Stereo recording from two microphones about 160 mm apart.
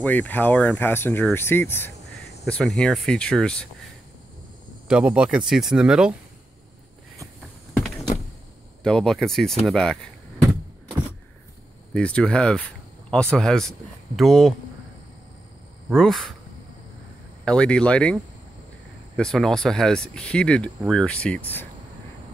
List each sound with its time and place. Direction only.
0.0 s speech: 10° left (ahead or behind)
2.4 s speech: 5° left (ahead or behind)
4.8 s speech: 5° right (ahead or behind)
7.7 s power windows: 5° left (ahead or behind)
8.8 s speech: centre (ahead or behind)
11.9 s speech: 5° left (ahead or behind)
15.9 s speech: 5° left (ahead or behind)
17.5 s speech: 5° left (ahead or behind)